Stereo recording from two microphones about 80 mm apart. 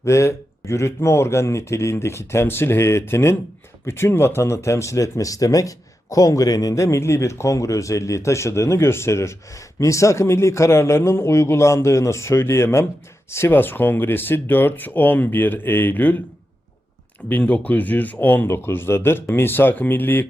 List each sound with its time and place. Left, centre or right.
0.0 s speech: left
6.7 s speech: left
17.2 s speech: left